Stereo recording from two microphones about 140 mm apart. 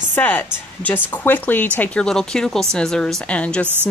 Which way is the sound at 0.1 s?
10° left (ahead or behind).